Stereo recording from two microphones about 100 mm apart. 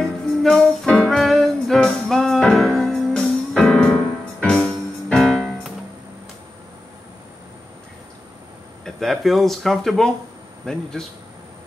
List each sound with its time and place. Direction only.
0.0 s music: 5° left (ahead or behind)
8.8 s a man's voice: centre (ahead or behind)